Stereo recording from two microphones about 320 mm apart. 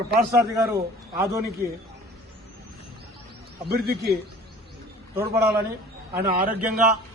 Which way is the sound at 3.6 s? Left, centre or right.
Right.